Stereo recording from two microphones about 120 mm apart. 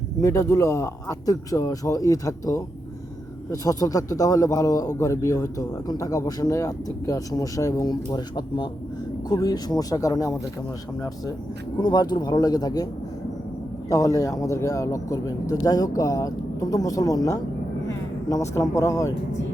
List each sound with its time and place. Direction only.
0.2 s a man's voice: 25° left (ahead or behind)
11.8 s speech: 35° left (ahead or behind)
13.9 s a man's voice: 25° left (ahead or behind)